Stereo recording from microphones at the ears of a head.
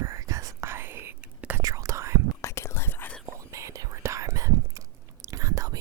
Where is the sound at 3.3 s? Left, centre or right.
Right.